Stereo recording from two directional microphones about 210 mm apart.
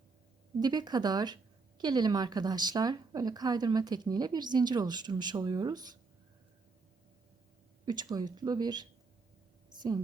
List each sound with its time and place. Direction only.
0.6 s speech: 20° right (ahead or behind)
7.9 s speech: 20° right (ahead or behind)